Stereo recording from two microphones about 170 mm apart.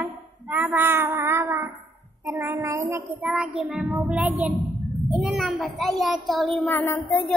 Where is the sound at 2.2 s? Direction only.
15° right (ahead or behind).